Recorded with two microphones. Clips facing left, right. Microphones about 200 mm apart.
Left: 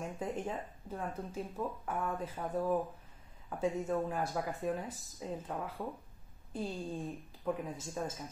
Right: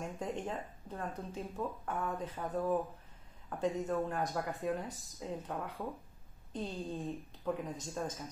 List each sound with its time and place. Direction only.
0.0 s speech: 5° left (ahead or behind)